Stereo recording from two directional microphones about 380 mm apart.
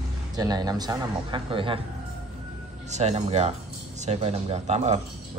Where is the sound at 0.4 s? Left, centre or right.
Centre.